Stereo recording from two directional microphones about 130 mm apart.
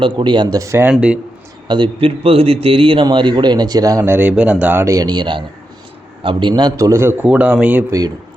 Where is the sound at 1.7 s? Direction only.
40° right (ahead or behind).